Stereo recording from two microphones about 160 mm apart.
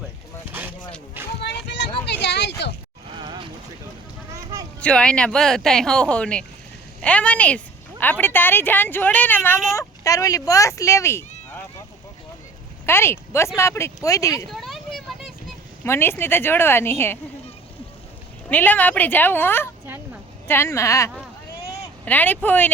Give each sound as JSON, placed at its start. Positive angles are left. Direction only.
{"t": 1.4, "sound": "a sound", "side_deg": 90}
{"t": 3.2, "sound": "a sound", "side_deg": -30}
{"t": 4.8, "sound": "a woman's voice", "side_deg": 5}
{"t": 12.8, "sound": "speech", "side_deg": 15}
{"t": 14.5, "sound": "vehicle", "side_deg": 0}
{"t": 15.8, "sound": "a woman's voice", "side_deg": 15}
{"t": 18.4, "sound": "a woman's voice", "side_deg": 10}